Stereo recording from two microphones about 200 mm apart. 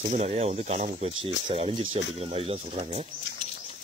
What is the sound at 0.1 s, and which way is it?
Speech, 35° right (ahead or behind).